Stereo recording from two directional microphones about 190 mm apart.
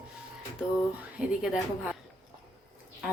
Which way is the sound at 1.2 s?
5° right (ahead or behind).